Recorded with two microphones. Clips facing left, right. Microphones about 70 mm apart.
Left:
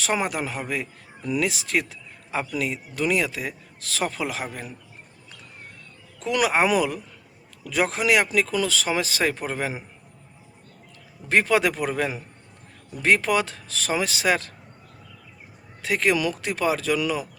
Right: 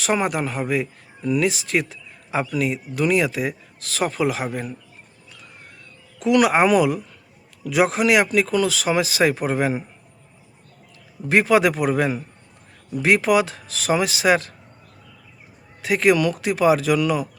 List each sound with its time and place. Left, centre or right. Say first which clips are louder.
0.0 s speech: right 4 dB; centre
6.1 s speech: right 5 dB; centre
11.3 s a man's voice: right 4 dB; centre
15.8 s speech: right 5 dB; centre